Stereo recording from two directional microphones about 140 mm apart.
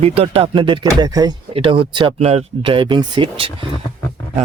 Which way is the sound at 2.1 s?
50° right (ahead or behind).